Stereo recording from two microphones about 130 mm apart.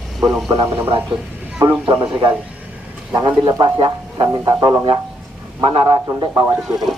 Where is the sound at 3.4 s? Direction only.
35° right (ahead or behind).